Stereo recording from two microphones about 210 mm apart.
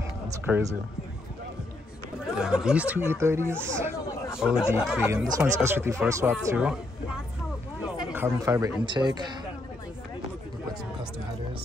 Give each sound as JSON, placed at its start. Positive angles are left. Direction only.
{"t": 2.3, "sound": "speech", "side_deg": -5}